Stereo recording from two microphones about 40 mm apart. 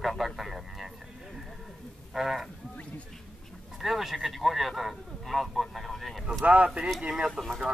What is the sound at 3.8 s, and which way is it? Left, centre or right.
Speech, centre.